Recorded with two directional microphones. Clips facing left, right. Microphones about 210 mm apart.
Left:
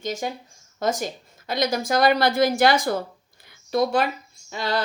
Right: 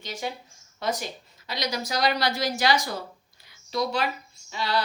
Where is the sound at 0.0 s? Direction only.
45° left (ahead or behind).